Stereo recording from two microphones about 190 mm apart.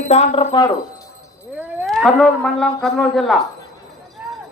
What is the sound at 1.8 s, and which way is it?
Speech, centre (ahead or behind).